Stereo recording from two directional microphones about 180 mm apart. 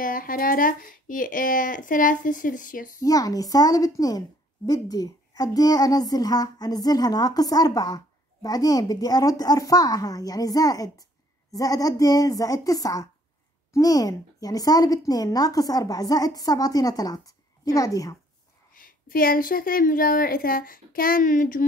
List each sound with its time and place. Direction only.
0.0 s a woman's voice: 50° left (ahead or behind)
3.0 s a child's voice: 20° left (ahead or behind)
18.7 s a woman's voice: 50° left (ahead or behind)